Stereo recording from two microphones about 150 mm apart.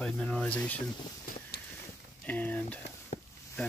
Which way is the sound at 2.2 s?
10° left (ahead or behind).